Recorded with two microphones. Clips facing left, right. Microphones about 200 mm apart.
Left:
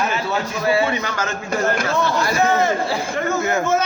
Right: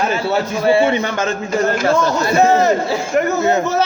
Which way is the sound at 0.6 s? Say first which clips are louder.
Right 5 dB; 25° right (ahead or behind).